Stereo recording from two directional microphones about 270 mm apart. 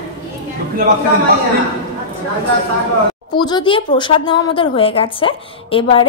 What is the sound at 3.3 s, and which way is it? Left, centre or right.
A woman's voice, centre.